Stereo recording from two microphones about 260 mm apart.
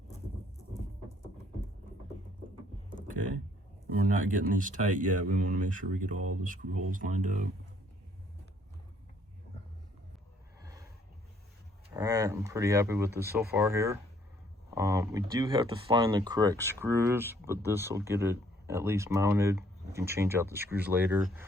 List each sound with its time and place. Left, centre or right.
4.1 s speech: right
10.6 s a sound: centre
11.9 s speech: centre